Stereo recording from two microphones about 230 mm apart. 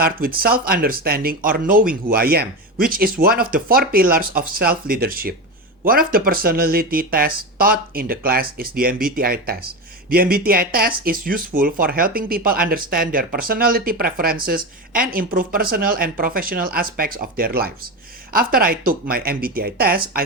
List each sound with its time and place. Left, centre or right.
0.0 s speech: right